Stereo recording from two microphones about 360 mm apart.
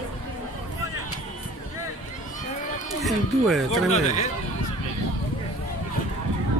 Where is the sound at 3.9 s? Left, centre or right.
Centre.